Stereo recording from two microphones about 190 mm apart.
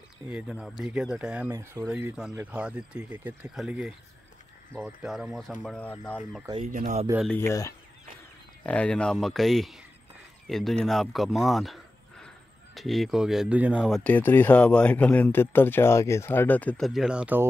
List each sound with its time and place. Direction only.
0.3 s speech: 5° right (ahead or behind)
6.6 s speech: 40° right (ahead or behind)
7.3 s speech: 15° left (ahead or behind); by 17.5 s 5° right (ahead or behind)